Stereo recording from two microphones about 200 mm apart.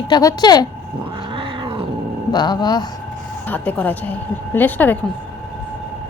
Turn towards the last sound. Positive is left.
turn(degrees=10)  # may be behind; listen again after turning